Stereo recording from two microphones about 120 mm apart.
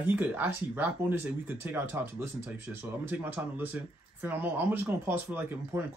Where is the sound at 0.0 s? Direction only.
15° right (ahead or behind).